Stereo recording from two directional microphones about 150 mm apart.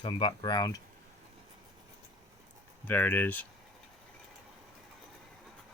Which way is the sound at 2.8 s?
10° left (ahead or behind).